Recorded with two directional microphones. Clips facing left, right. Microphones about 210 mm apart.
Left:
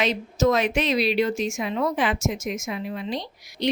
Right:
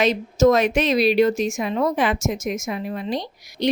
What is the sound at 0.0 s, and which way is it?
A woman's voice, 45° right (ahead or behind).